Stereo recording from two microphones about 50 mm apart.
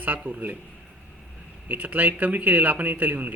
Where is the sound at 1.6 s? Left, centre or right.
Right.